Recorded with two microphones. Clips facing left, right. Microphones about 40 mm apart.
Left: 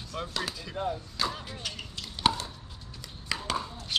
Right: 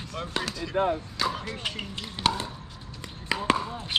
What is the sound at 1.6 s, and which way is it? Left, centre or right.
Speech, right.